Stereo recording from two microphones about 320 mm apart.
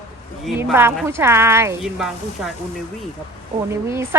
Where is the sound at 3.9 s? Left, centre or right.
Centre.